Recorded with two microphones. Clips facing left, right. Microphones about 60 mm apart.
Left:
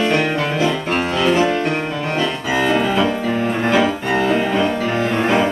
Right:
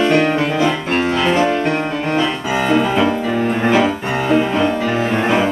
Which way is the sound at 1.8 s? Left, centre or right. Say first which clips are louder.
Right 3 dB; right.